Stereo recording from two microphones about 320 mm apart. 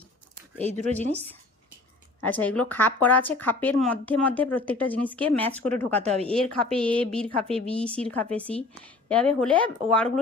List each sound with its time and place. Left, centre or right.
0.8 s a woman's voice: right
2.2 s speech: centre